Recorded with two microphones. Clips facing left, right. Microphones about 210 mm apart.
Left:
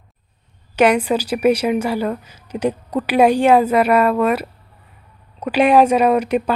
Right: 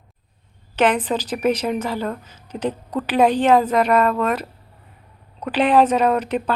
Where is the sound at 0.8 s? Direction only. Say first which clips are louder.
Left 4 dB; 10° left (ahead or behind).